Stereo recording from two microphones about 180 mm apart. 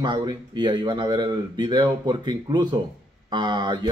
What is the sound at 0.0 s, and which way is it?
Speech, 25° right (ahead or behind).